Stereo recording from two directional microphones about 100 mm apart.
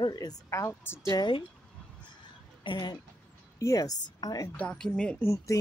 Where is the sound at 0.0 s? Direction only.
40° left (ahead or behind).